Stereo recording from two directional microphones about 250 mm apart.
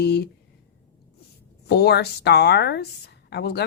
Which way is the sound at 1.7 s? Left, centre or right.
Left.